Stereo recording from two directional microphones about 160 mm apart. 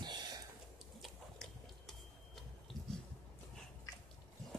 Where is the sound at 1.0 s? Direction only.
Centre (ahead or behind).